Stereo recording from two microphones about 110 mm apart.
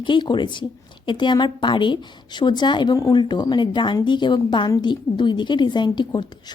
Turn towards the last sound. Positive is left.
turn(degrees=45)  # may be behind; listen again after turning